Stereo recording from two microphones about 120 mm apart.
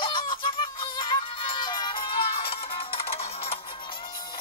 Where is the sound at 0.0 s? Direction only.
45° left (ahead or behind).